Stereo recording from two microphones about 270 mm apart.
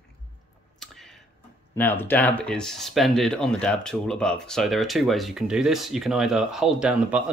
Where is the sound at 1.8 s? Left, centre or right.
Centre.